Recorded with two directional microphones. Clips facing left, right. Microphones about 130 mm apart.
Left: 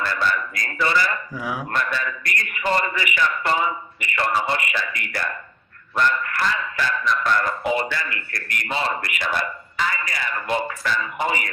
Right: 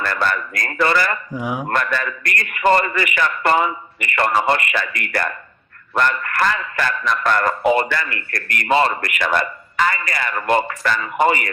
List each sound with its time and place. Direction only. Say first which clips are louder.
0.0 s a man's voice: right 2 dB; 55° right (ahead or behind)
1.3 s speech: right 4 dB; 20° right (ahead or behind)
1.7 s a man's voice: right 3 dB; 60° right (ahead or behind)